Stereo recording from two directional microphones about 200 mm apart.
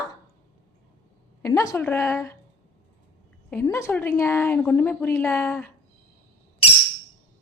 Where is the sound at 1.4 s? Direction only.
15° left (ahead or behind).